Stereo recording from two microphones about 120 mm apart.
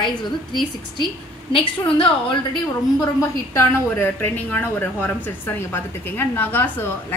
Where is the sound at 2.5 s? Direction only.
30° left (ahead or behind).